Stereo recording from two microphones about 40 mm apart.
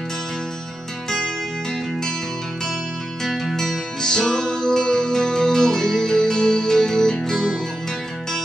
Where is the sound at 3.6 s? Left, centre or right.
Centre.